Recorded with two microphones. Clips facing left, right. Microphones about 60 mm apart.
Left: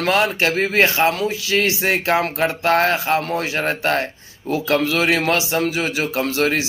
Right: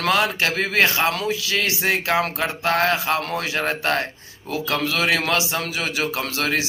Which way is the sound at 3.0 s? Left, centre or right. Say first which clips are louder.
Left 3 dB; centre.